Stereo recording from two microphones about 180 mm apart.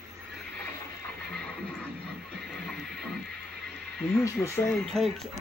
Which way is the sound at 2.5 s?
Centre (ahead or behind).